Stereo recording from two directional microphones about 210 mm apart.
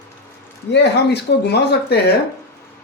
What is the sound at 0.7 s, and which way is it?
Speech, 55° left (ahead or behind).